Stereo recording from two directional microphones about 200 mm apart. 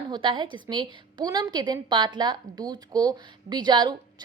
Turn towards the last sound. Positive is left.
turn(degrees=-20)  # may be behind; listen again after turning